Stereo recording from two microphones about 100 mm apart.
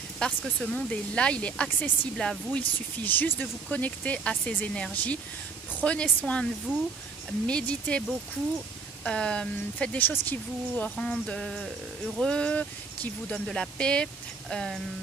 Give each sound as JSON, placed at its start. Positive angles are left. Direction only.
{"t": 0.2, "sound": "speech", "side_deg": 10}
{"t": 9.0, "sound": "speech", "side_deg": 10}
{"t": 11.0, "sound": "music", "side_deg": 10}
{"t": 12.2, "sound": "speech", "side_deg": 10}